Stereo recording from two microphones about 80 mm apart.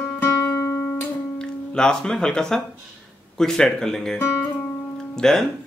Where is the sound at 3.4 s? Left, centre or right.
Centre.